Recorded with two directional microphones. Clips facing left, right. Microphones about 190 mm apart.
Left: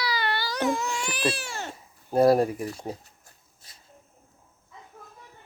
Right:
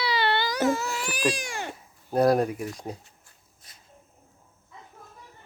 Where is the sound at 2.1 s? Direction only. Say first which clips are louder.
Left 2 dB; 5° left (ahead or behind).